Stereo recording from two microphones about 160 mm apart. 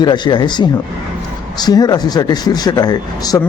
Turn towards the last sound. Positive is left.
turn(degrees=25)  # may be behind; listen again after turning